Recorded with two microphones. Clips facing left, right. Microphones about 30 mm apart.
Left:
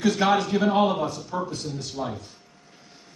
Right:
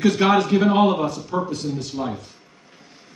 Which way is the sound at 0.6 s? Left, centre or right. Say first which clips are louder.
Right 4 dB; right.